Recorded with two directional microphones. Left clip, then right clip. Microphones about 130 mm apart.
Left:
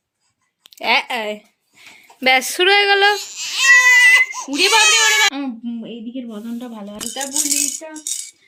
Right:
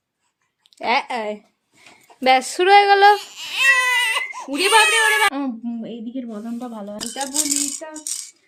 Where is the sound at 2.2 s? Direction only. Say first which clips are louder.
Left 1 dB; 5° right (ahead or behind).